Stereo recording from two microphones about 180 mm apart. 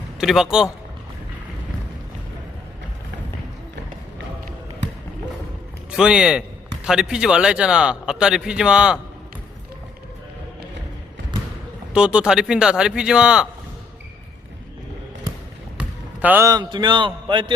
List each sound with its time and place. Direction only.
0.2 s a man's voice: 5° right (ahead or behind)
5.9 s a man's voice: 5° right (ahead or behind)
11.9 s a man's voice: 5° right (ahead or behind)
15.8 s basketball bounce: 10° right (ahead or behind)
16.5 s a man's voice: 25° right (ahead or behind)